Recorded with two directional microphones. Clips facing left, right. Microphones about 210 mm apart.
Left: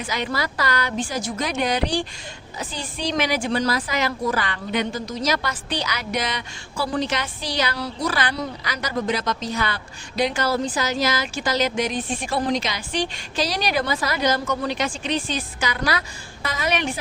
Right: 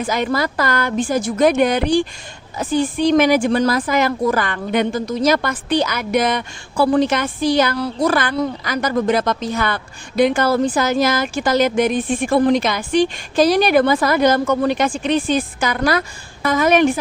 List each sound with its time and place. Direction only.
0.0 s a woman's voice: 50° right (ahead or behind)